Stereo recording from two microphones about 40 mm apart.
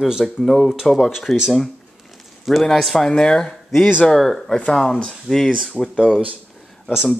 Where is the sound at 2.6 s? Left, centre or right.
Centre.